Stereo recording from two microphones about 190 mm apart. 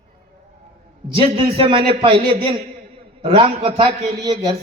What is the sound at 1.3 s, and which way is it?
A man's voice, 30° right (ahead or behind).